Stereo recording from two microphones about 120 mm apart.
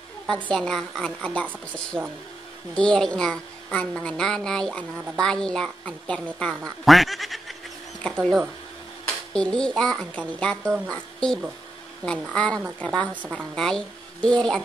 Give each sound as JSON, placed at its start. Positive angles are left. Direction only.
{"t": 0.3, "sound": "a child's voice", "side_deg": 5}
{"t": 9.0, "sound": "a child's voice", "side_deg": 10}
{"t": 12.0, "sound": "speech", "side_deg": -35}
{"t": 12.4, "sound": "a child's voice", "side_deg": 10}